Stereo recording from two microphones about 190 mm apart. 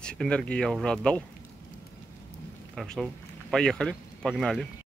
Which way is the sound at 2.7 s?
Centre (ahead or behind).